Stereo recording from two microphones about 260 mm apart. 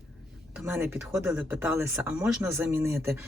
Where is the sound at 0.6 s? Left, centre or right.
Centre.